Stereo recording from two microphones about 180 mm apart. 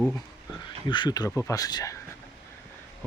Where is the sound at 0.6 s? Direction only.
25° left (ahead or behind).